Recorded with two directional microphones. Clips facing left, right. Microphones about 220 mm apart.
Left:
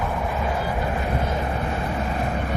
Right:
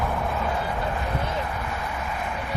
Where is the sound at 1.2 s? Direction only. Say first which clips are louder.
Left 4 dB; 30° left (ahead or behind).